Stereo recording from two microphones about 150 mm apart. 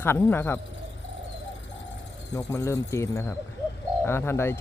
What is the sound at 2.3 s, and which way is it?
Speech, 15° left (ahead or behind).